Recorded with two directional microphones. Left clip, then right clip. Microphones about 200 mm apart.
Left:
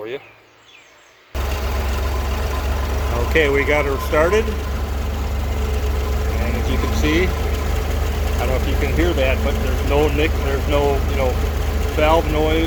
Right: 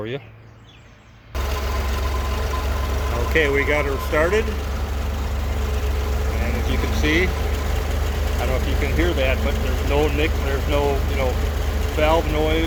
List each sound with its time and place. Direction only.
3.3 s speech: centre (ahead or behind)
6.7 s vehicle: centre (ahead or behind)
8.4 s speech: 5° right (ahead or behind)